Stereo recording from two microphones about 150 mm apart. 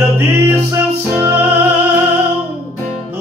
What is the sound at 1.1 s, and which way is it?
Music, 10° right (ahead or behind).